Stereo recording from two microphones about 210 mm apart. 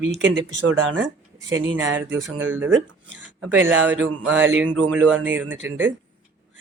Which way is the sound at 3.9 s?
65° right (ahead or behind).